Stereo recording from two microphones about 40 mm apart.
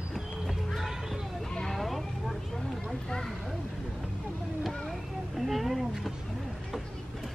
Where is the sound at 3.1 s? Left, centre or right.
Centre.